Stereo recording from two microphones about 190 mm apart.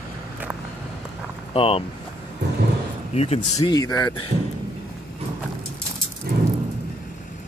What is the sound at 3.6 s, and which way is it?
Speech, 20° left (ahead or behind).